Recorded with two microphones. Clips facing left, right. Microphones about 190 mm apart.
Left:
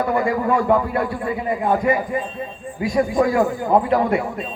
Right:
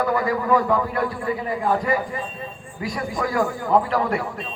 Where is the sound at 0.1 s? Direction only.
25° left (ahead or behind).